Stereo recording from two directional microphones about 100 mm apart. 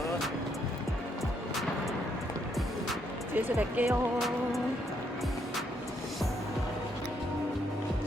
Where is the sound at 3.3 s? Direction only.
15° right (ahead or behind).